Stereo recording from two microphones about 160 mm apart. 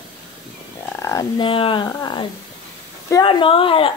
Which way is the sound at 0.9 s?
20° left (ahead or behind).